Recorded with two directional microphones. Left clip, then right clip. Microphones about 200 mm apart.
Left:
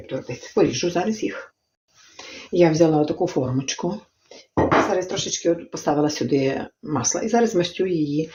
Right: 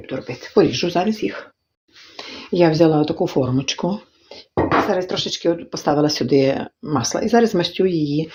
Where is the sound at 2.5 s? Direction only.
45° right (ahead or behind).